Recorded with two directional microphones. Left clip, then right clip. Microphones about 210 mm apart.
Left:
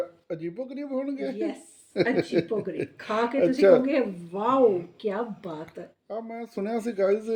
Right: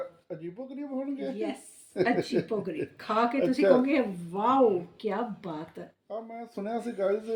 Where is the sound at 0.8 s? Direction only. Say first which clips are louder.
Left 3 dB; 45° left (ahead or behind).